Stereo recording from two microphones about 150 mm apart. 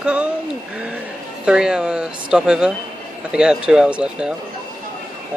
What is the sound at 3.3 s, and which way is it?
Speech, 5° right (ahead or behind).